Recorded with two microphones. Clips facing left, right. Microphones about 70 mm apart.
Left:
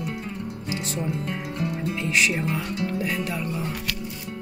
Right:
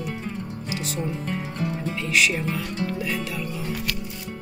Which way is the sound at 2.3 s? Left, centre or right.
Centre.